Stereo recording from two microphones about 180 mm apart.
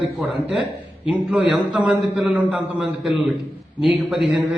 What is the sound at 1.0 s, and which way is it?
A man's voice, 5° right (ahead or behind).